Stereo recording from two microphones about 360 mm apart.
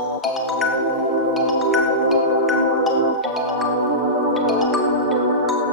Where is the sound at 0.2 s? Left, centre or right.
Centre.